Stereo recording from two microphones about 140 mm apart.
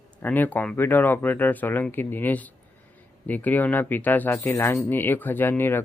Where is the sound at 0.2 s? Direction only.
15° left (ahead or behind).